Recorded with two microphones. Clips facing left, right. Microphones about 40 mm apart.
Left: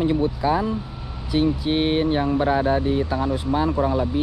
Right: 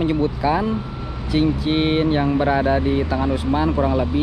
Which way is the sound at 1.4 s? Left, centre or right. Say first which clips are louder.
Right 2 dB; right.